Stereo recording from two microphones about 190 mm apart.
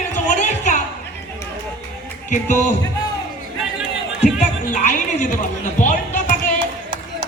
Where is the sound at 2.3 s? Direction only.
40° left (ahead or behind).